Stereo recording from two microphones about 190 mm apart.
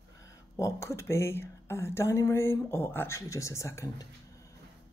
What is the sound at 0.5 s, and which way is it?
Speech, 15° left (ahead or behind).